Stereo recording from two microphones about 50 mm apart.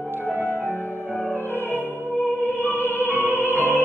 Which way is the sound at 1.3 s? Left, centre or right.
Left.